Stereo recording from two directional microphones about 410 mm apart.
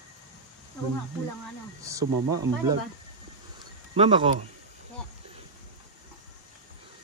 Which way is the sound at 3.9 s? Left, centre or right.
Centre.